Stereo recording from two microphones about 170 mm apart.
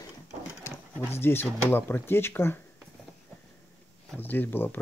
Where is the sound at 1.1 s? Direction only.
15° left (ahead or behind).